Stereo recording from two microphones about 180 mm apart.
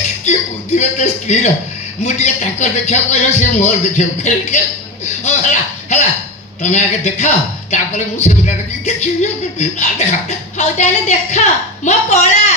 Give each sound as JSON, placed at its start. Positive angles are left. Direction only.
{"t": 0.8, "sound": "speech", "side_deg": 40}